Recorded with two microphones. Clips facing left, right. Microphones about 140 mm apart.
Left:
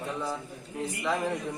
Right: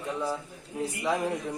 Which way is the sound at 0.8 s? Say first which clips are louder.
Right 2 dB; 10° right (ahead or behind).